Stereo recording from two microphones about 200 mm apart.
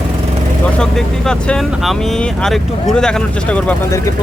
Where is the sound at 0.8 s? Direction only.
5° left (ahead or behind).